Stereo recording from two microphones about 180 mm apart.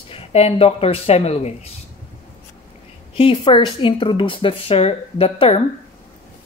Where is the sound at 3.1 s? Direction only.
30° left (ahead or behind).